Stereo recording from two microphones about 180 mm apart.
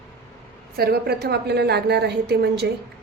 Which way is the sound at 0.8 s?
60° right (ahead or behind).